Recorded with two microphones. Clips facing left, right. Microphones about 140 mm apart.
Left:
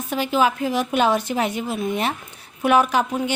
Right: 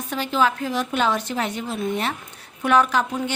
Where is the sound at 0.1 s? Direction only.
10° left (ahead or behind).